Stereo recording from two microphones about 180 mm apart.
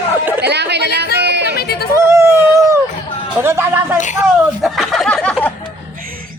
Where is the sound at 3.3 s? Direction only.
15° right (ahead or behind).